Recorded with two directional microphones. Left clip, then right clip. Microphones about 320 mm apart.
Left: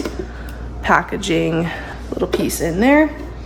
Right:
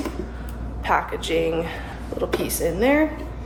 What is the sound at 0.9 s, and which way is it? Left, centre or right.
A woman's voice, left.